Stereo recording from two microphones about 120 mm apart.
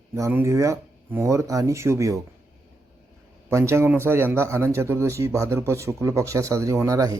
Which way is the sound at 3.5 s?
25° right (ahead or behind).